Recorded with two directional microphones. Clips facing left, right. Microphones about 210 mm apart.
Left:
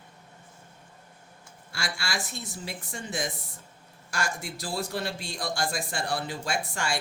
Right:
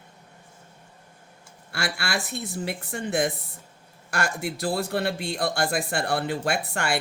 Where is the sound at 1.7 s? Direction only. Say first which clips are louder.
Right 5 dB; 60° right (ahead or behind).